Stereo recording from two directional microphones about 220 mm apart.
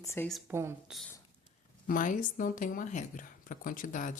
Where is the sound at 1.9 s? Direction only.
40° left (ahead or behind).